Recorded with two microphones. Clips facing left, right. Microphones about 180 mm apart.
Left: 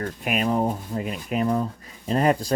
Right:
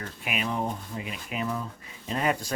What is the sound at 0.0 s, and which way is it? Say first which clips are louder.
Speech: left 7 dB; 45° left (ahead or behind).